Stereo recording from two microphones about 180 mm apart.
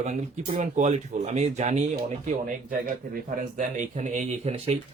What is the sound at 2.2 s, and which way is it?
Speech, 50° right (ahead or behind).